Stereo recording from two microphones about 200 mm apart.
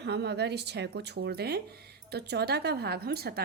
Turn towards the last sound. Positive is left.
turn(degrees=-50)  # may be behind; listen again after turning